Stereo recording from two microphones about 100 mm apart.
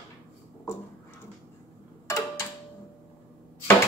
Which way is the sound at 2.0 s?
30° left (ahead or behind).